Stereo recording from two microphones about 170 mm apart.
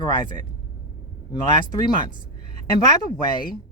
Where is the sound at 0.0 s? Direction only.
25° left (ahead or behind).